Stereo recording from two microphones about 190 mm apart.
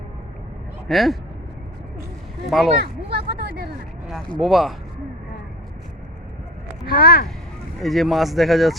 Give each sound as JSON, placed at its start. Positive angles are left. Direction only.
{"t": 0.9, "sound": "speech", "side_deg": 0}
{"t": 2.5, "sound": "speech", "side_deg": 0}
{"t": 3.1, "sound": "speech", "side_deg": -55}
{"t": 4.4, "sound": "speech", "side_deg": 0}
{"t": 6.8, "sound": "speech", "side_deg": 55}
{"t": 7.8, "sound": "speech", "side_deg": 0}